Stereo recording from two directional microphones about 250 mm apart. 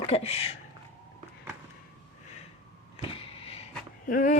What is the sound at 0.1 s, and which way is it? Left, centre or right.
Speech, left.